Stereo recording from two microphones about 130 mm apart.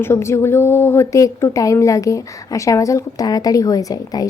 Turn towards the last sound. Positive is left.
turn(degrees=30)  # may be behind; listen again after turning